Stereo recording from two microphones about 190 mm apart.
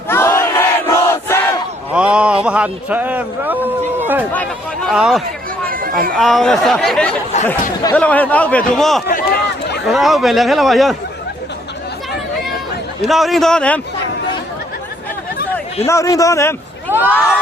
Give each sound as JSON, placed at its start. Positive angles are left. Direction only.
{"t": 0.1, "sound": "battle cry", "side_deg": 15}
{"t": 1.9, "sound": "a man's voice", "side_deg": -5}
{"t": 4.3, "sound": "a man's voice", "side_deg": 5}
{"t": 5.6, "sound": "a sound", "side_deg": -50}
{"t": 6.1, "sound": "a man's voice", "side_deg": 0}
{"t": 9.0, "sound": "run", "side_deg": 45}
{"t": 9.8, "sound": "a man's voice", "side_deg": 0}
{"t": 13.1, "sound": "a man's voice", "side_deg": 0}
{"t": 15.9, "sound": "a man's voice", "side_deg": 15}
{"t": 16.9, "sound": "speech", "side_deg": -10}